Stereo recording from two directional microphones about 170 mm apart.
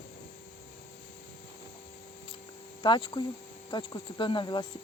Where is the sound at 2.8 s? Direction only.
25° left (ahead or behind).